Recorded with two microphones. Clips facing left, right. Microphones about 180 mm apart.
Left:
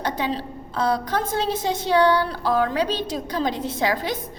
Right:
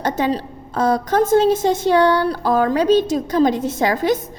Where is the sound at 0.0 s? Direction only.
45° right (ahead or behind).